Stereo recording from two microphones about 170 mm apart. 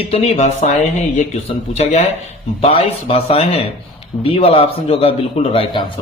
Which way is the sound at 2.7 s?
35° left (ahead or behind).